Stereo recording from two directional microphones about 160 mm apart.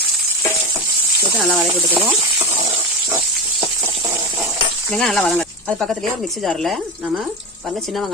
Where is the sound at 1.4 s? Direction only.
Centre (ahead or behind).